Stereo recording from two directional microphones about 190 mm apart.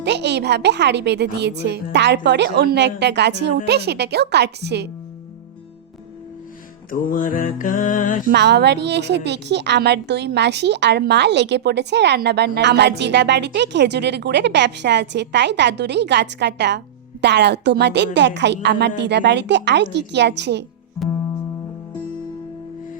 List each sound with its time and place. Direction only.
0.0 s a woman's voice: 65° right (ahead or behind)
6.9 s a sound: 45° left (ahead or behind)
8.3 s a woman's voice: 60° right (ahead or behind)